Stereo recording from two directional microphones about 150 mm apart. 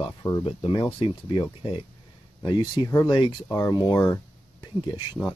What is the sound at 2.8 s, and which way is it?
Speech, 25° left (ahead or behind).